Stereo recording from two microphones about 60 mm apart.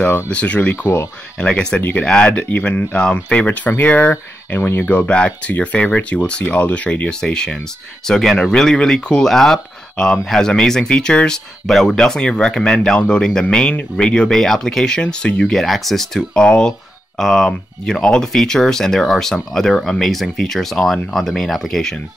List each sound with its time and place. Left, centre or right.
0.3 s speech: left
1.8 s speech: left
2.0 s speech: centre
4.1 s speech: left
4.8 s speech: left
15.5 s speech: centre